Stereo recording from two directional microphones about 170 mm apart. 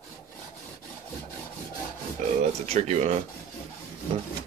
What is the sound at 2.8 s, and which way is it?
Speech, 40° right (ahead or behind).